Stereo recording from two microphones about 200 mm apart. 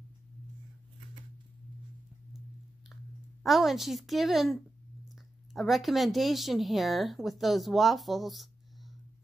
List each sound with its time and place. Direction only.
3.4 s a woman's voice: centre (ahead or behind)